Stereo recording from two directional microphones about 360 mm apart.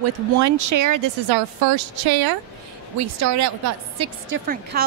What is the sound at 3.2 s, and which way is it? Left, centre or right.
Speech, right.